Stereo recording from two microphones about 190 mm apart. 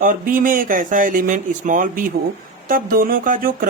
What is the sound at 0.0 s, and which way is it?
A woman's voice, 50° right (ahead or behind).